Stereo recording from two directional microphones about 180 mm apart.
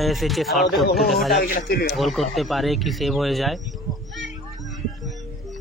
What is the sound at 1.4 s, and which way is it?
Speech, 55° left (ahead or behind).